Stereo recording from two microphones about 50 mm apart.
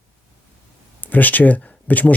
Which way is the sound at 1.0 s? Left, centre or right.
Left.